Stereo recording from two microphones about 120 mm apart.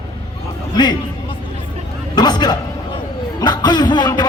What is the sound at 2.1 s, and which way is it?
A man's voice, 35° left (ahead or behind).